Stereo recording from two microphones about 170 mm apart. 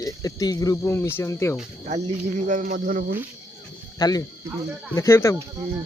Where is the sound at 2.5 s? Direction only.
50° right (ahead or behind).